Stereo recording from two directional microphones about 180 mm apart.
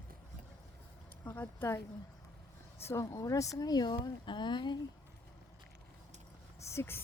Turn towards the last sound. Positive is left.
turn(degrees=15)  # may be behind; listen again after turning